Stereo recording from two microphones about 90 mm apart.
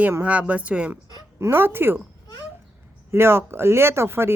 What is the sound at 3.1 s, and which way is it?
Speech, 30° right (ahead or behind).